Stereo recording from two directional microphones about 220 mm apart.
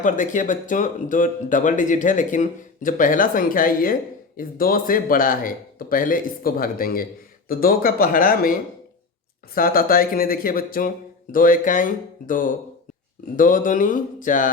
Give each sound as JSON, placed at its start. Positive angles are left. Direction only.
{"t": 0.0, "sound": "speech", "side_deg": 35}
{"t": 9.6, "sound": "speech", "side_deg": 40}